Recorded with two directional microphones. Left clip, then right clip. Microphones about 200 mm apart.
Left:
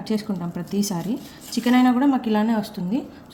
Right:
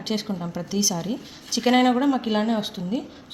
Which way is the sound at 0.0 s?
25° right (ahead or behind).